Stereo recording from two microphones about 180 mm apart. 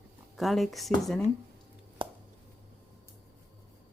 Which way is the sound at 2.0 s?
30° right (ahead or behind).